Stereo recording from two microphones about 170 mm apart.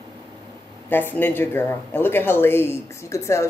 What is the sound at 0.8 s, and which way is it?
Speech, 10° left (ahead or behind).